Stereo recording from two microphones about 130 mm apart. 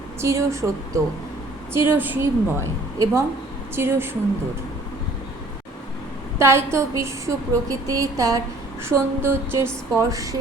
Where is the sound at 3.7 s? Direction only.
20° right (ahead or behind).